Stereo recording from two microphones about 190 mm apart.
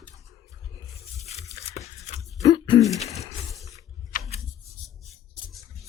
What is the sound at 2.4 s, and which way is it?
Throat clearing, 20° left (ahead or behind).